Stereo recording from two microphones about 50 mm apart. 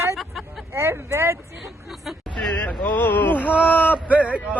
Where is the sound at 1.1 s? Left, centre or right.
Right.